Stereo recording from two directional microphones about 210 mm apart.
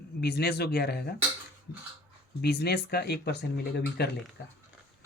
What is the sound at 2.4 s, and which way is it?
Speech, 50° left (ahead or behind).